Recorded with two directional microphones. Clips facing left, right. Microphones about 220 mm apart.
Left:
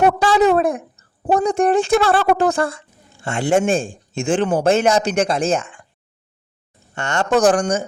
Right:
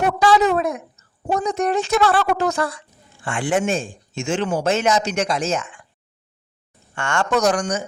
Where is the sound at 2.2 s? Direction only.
50° left (ahead or behind).